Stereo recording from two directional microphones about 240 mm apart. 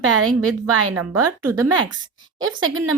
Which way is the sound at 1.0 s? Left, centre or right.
Right.